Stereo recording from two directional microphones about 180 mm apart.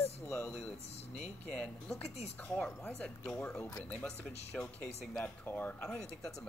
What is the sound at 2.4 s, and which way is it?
Speech, 10° left (ahead or behind).